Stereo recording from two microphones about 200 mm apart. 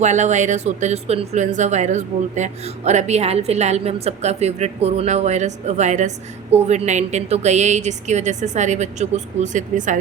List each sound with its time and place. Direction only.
0.0 s speech: 35° right (ahead or behind)